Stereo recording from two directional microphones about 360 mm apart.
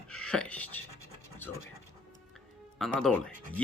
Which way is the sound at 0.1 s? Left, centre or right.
Centre.